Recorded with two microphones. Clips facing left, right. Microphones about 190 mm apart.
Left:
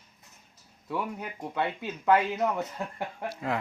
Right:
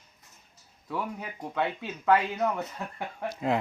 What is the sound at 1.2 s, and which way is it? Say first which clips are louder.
Speech: right 1 dB; 5° left (ahead or behind).